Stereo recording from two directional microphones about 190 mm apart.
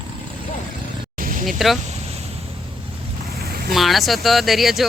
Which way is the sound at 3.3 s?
55° right (ahead or behind).